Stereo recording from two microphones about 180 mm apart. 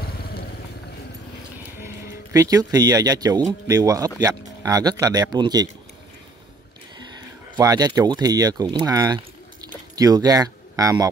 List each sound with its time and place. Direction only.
0.0 s vehicle: 60° left (ahead or behind)
2.3 s speech: 20° right (ahead or behind)
7.0 s speech: 25° right (ahead or behind)